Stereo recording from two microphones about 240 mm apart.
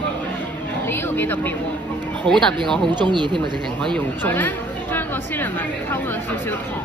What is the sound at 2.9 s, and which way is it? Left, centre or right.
Speech, centre.